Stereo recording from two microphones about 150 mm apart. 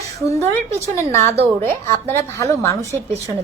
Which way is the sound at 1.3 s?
40° right (ahead or behind).